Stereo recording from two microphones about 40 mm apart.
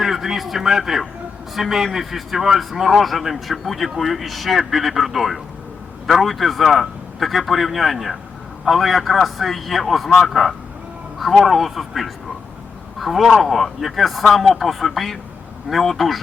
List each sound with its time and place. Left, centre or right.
0.0 s a man's voice: centre